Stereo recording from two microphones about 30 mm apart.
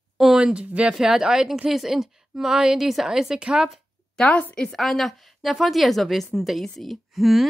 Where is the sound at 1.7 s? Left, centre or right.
Centre.